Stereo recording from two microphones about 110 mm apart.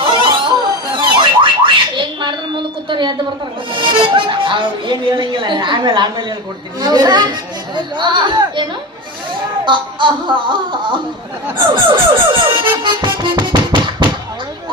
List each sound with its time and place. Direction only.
0.0 s music: 45° right (ahead or behind)
2.9 s a sound: 45° right (ahead or behind)
3.7 s music: 50° right (ahead or behind)
6.7 s speech: 40° right (ahead or behind)
7.8 s music: 45° right (ahead or behind)
9.6 s music: 50° right (ahead or behind)